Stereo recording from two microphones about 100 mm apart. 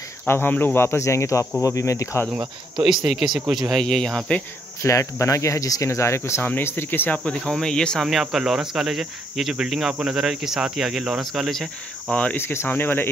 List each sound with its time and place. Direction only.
0.3 s speech: 20° left (ahead or behind)
2.3 s speech: 5° right (ahead or behind)
4.8 s speech: 30° left (ahead or behind); by 12.2 s centre (ahead or behind)
12.2 s speech: 20° left (ahead or behind)